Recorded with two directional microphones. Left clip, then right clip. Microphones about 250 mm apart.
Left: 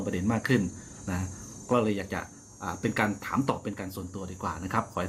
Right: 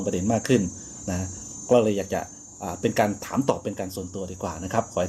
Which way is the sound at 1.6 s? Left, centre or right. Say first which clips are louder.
Right 7 dB; centre.